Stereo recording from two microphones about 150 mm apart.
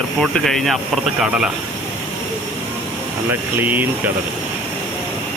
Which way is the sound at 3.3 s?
10° right (ahead or behind).